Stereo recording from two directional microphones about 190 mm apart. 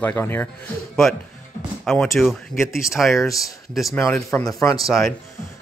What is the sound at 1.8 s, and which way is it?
Speech, centre (ahead or behind).